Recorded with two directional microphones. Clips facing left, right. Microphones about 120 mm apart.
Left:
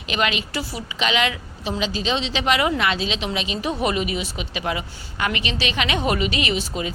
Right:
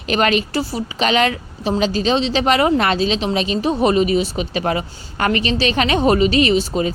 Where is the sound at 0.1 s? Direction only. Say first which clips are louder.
Right 7 dB; 45° right (ahead or behind).